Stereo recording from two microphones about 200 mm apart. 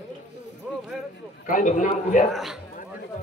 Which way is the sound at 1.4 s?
40° left (ahead or behind).